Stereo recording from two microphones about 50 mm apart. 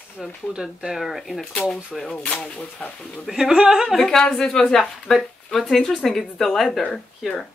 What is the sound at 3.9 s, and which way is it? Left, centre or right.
A woman's voice, centre.